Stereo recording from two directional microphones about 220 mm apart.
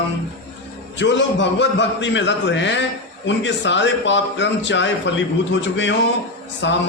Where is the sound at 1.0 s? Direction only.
55° left (ahead or behind).